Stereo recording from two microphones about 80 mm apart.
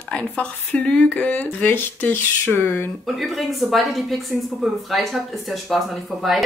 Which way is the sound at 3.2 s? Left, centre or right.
Centre.